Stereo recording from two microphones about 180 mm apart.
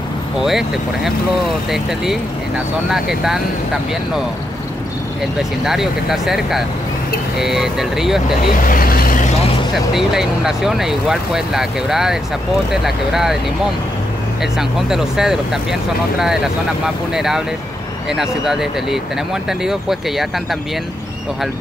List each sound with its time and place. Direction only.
0.4 s speech: centre (ahead or behind)
5.7 s speech: centre (ahead or behind)
8.6 s vehicle: 55° left (ahead or behind)
9.9 s speech: centre (ahead or behind)
14.4 s speech: centre (ahead or behind)